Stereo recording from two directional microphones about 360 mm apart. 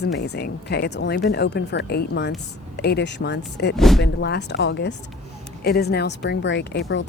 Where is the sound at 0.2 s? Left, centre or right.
Left.